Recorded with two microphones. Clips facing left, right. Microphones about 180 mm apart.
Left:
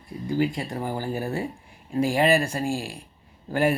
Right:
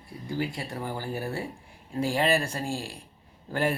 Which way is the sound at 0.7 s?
45° left (ahead or behind).